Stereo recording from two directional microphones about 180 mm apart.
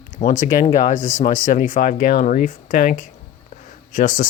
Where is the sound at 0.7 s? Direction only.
45° left (ahead or behind).